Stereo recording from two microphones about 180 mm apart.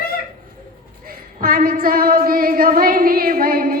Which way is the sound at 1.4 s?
50° right (ahead or behind).